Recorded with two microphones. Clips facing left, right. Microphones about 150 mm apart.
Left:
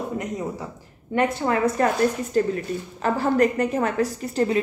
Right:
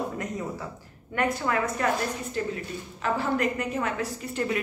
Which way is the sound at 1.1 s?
30° left (ahead or behind).